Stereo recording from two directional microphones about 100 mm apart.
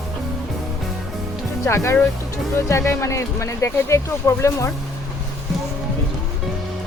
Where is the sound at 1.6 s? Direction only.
30° left (ahead or behind).